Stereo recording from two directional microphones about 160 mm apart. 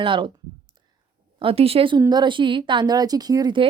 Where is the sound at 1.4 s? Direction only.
35° right (ahead or behind).